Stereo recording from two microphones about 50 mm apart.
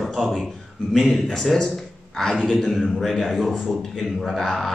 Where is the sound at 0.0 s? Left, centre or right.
Centre.